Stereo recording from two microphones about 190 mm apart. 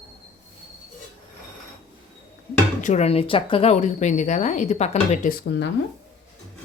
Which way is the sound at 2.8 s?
35° left (ahead or behind).